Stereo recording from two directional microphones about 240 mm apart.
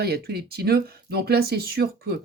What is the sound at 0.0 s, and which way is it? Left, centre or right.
Speech, right.